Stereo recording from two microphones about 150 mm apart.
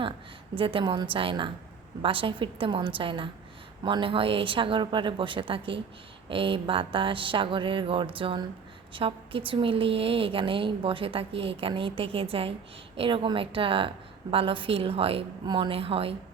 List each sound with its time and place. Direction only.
0.5 s a woman's voice: 35° right (ahead or behind)